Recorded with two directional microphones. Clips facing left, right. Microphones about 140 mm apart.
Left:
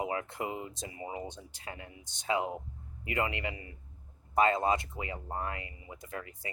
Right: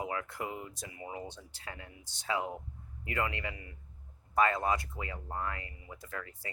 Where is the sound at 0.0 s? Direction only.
25° left (ahead or behind).